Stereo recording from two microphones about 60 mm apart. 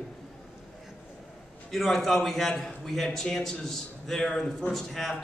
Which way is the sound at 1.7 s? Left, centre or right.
Centre.